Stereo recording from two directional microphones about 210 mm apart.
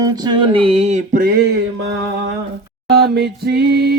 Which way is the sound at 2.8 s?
50° right (ahead or behind).